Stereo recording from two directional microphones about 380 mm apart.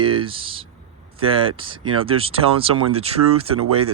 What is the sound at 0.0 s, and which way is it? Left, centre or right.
Speech, centre.